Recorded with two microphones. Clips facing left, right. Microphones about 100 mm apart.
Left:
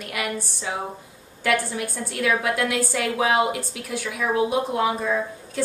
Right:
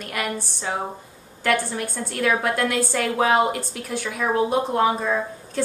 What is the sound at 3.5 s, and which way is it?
Speech, 5° left (ahead or behind).